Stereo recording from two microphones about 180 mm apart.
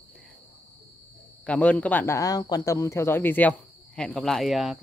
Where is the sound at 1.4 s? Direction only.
5° left (ahead or behind).